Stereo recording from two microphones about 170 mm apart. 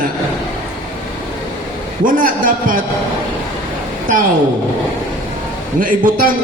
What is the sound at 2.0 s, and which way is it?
Speech, 55° right (ahead or behind).